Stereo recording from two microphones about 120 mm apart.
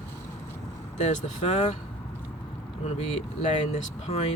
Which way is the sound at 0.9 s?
75° left (ahead or behind).